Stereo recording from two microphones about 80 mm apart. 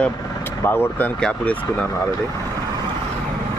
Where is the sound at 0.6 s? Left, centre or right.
Left.